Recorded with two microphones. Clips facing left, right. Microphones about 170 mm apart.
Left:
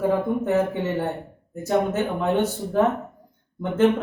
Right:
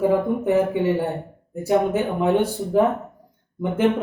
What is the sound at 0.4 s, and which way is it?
A man's voice, 10° right (ahead or behind).